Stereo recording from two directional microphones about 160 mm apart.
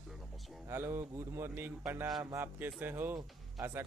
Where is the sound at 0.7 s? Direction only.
15° right (ahead or behind).